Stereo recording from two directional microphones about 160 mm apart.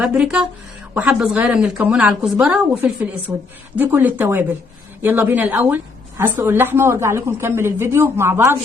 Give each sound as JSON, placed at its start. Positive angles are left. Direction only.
{"t": 0.0, "sound": "a woman's voice", "side_deg": -5}